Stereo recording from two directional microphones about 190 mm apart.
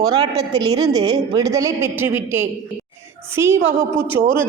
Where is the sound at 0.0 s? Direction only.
20° right (ahead or behind).